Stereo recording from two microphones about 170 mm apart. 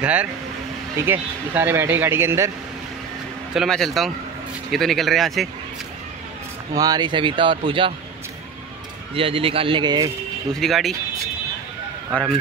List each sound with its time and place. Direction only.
0.0 s speech: 10° right (ahead or behind)
3.5 s speech: centre (ahead or behind)
6.7 s speech: 20° right (ahead or behind)
9.1 s speech: 30° right (ahead or behind)
10.5 s speech: centre (ahead or behind)
12.1 s speech: 5° left (ahead or behind)